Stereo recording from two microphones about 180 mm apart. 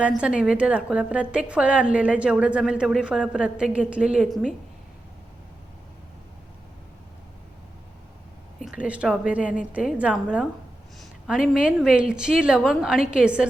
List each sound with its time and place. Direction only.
0.0 s a woman's voice: 5° right (ahead or behind)
8.6 s a woman's voice: 5° right (ahead or behind)